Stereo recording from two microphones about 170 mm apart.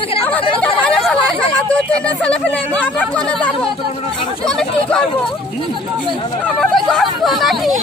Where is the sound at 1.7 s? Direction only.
10° left (ahead or behind).